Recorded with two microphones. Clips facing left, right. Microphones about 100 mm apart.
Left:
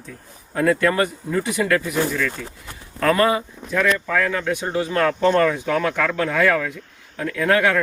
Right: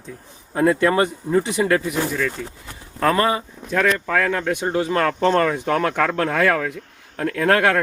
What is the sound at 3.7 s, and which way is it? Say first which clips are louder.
Speech: right 1 dB; 50° right (ahead or behind).